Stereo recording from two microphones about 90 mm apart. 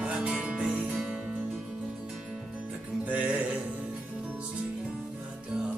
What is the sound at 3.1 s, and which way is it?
Music, 15° right (ahead or behind).